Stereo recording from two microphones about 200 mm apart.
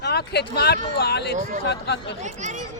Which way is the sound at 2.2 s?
35° right (ahead or behind).